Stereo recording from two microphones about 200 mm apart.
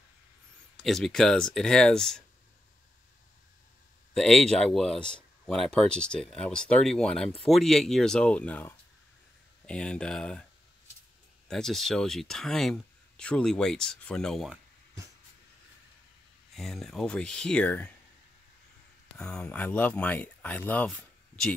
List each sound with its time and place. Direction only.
0.7 s speech: centre (ahead or behind)
4.1 s speech: centre (ahead or behind)
11.4 s speech: centre (ahead or behind)
16.5 s speech: centre (ahead or behind)
19.1 s speech: 5° left (ahead or behind)